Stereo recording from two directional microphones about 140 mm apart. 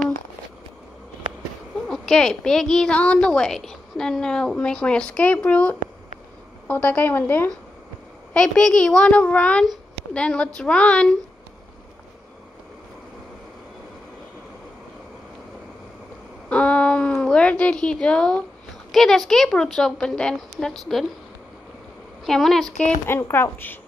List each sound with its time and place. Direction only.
1.9 s a woman's voice: 5° left (ahead or behind)
16.4 s a woman's voice: 10° left (ahead or behind)
22.2 s a woman's voice: centre (ahead or behind)
23.0 s a child's voice: 15° left (ahead or behind)